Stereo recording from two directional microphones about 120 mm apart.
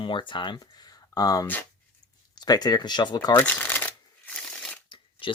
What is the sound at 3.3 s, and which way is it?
Shuffling cards, 15° left (ahead or behind).